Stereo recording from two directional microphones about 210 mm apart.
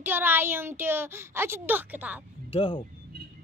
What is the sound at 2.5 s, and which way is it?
Speech, 25° left (ahead or behind).